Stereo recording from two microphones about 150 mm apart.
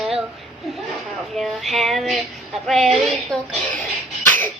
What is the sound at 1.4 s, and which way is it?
Child singing, centre (ahead or behind).